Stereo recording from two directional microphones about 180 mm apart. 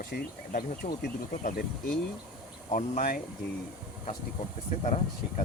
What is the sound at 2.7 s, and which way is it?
Speech, 45° left (ahead or behind).